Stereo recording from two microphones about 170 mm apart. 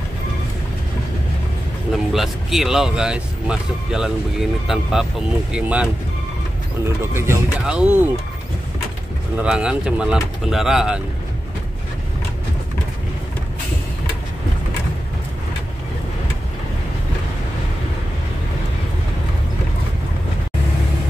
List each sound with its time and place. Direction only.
1.9 s speech: centre (ahead or behind)
7.0 s speech: 15° right (ahead or behind)
9.4 s speech: 5° right (ahead or behind)